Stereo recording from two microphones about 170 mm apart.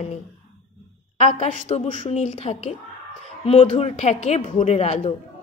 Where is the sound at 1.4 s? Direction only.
40° left (ahead or behind).